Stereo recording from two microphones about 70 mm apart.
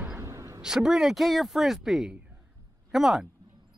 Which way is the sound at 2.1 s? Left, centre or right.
Right.